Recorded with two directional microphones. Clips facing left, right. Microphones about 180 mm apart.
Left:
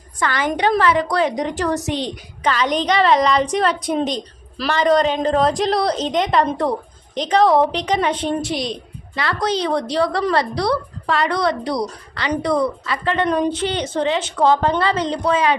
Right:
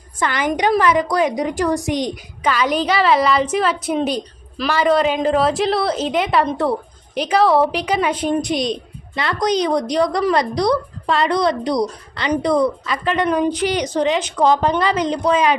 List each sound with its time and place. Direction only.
0.2 s a woman's voice: 20° right (ahead or behind)